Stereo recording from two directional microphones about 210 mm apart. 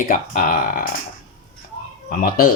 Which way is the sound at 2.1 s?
45° left (ahead or behind).